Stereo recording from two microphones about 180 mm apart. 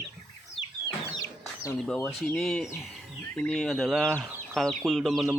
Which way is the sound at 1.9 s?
15° left (ahead or behind).